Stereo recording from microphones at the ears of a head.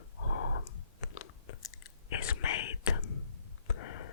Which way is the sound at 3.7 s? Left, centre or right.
Left.